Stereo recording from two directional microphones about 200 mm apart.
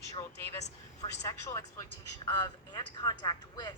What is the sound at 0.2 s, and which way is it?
Speech, 15° left (ahead or behind).